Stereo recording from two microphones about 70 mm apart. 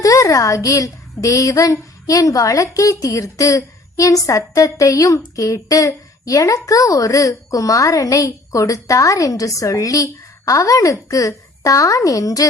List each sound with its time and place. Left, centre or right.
0.0 s a woman's voice: left